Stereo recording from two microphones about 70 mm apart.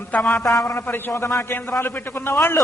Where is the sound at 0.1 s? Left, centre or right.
Centre.